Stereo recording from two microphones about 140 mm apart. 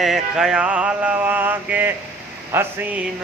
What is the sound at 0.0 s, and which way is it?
Mantra, centre (ahead or behind).